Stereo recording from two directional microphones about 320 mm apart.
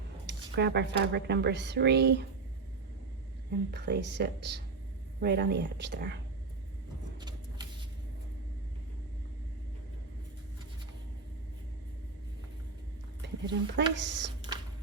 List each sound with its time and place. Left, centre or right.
0.3 s speech: right
3.7 s speech: right
7.2 s vehicle: centre
13.2 s speech: right